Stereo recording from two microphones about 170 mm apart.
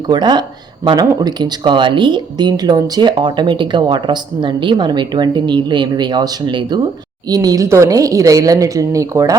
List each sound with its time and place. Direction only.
0.1 s speech: 25° right (ahead or behind)